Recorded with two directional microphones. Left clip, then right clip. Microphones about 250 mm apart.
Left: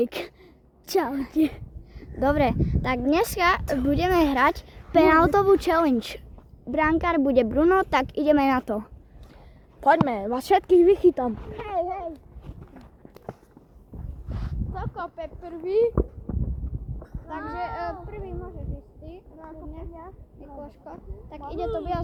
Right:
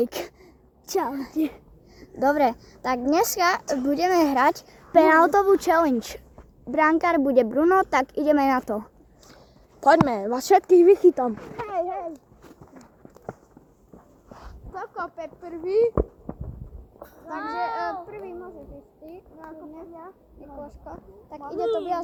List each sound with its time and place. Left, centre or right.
0.0 s speech: centre
0.9 s a child's voice: left
2.0 s speech: centre
9.8 s speech: right
14.3 s a sound: left
14.7 s speech: right
17.0 s a sound: right
17.6 s speech: centre
19.5 s speech: centre